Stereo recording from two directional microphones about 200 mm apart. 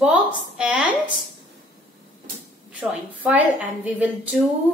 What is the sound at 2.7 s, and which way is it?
A woman's voice, 10° right (ahead or behind).